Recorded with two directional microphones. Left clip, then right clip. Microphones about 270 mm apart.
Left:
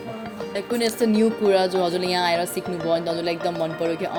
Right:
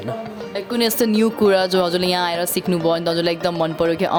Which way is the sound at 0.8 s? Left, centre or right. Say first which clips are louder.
Right 3 dB; right.